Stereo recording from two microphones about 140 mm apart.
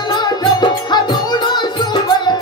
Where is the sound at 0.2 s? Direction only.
30° left (ahead or behind).